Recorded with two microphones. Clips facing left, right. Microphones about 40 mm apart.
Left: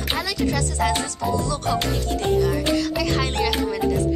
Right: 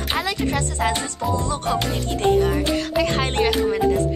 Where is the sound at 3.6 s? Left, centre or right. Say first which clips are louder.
Right 3 dB; right.